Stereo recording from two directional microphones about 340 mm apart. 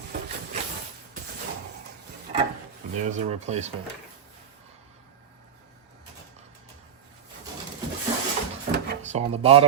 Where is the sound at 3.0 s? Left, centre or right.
Right.